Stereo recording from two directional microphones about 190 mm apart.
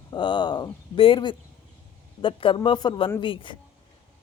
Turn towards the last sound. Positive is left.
turn(degrees=25)  # may be behind; listen again after turning